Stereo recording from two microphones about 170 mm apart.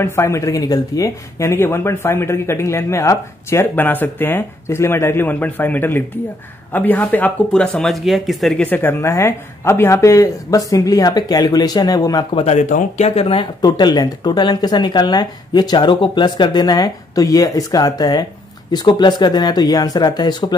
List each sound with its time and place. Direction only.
0.0 s speech: 15° left (ahead or behind); by 8.6 s centre (ahead or behind)
8.6 s speech: 10° left (ahead or behind)
12.4 s speech: 40° left (ahead or behind); by 20.5 s 25° left (ahead or behind)